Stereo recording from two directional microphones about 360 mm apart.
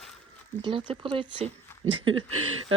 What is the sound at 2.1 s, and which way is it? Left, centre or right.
Speech, right.